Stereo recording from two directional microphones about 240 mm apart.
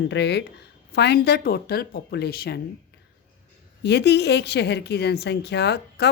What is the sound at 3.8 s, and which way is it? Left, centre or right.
A woman's voice, left.